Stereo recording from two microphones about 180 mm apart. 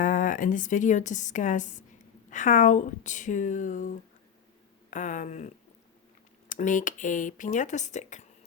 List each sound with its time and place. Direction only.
0.0 s a woman's voice: 50° left (ahead or behind)
6.5 s a woman's voice: 45° left (ahead or behind)